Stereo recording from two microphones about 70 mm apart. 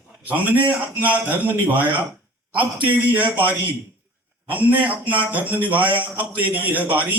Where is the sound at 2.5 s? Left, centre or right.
Right.